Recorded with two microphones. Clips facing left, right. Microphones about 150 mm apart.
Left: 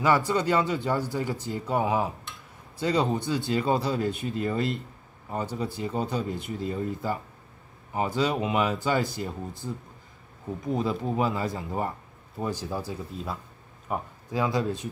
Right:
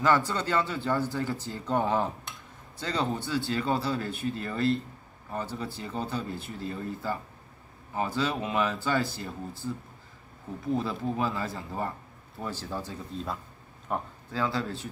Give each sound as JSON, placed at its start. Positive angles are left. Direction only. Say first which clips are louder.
{"t": 0.0, "sound": "speech", "louder": "left 2 dB", "side_deg": 10}
{"t": 13.8, "sound": "a sound", "louder": "left 1 dB", "side_deg": 5}
{"t": 14.4, "sound": "speech", "louder": "left 3 dB", "side_deg": 15}